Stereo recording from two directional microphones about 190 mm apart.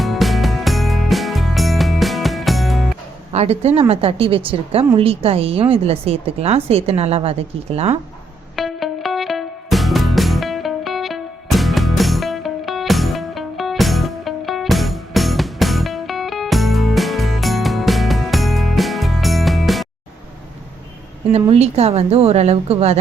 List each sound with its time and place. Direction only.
0.0 s music: centre (ahead or behind)
3.3 s a woman's voice: 35° right (ahead or behind)
8.5 s music: centre (ahead or behind)
21.3 s a woman's voice: 35° right (ahead or behind)